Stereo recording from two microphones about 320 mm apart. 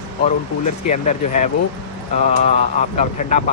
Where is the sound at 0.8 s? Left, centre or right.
Left.